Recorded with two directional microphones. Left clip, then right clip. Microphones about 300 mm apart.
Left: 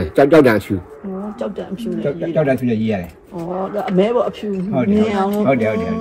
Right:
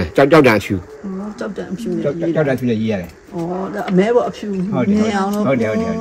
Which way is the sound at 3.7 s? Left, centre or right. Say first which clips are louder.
Right 1 dB; right.